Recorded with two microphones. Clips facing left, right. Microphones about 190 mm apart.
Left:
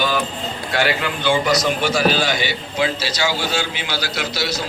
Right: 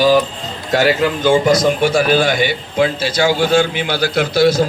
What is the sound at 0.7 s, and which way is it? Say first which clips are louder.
A man's voice: right 7 dB; 40° right (ahead or behind).